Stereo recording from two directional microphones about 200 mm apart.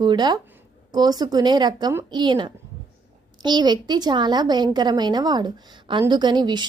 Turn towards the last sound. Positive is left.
turn(degrees=-20)  # may be behind; listen again after turning